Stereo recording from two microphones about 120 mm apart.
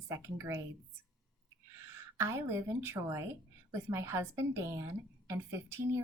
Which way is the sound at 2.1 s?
20° right (ahead or behind).